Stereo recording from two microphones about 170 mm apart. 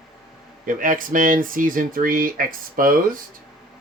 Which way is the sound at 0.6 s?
55° right (ahead or behind).